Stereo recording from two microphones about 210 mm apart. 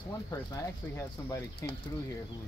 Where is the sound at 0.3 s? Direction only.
15° left (ahead or behind).